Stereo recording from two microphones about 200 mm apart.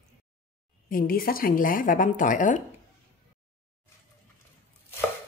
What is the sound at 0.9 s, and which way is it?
Speech, 45° left (ahead or behind).